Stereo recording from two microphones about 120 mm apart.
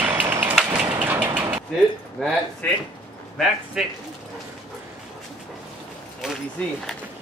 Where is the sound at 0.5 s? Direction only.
10° right (ahead or behind).